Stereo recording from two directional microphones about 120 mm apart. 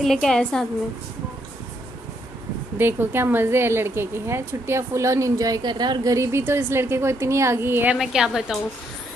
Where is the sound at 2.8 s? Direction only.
20° right (ahead or behind); by 6.1 s 35° right (ahead or behind).